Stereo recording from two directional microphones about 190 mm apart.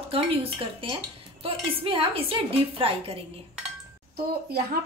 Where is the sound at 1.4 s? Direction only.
30° right (ahead or behind).